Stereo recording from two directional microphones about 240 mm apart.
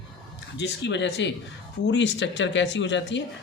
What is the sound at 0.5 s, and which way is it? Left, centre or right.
Speech, left.